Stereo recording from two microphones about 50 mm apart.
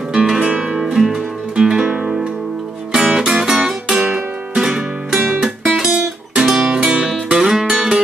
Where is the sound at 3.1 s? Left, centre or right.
Centre.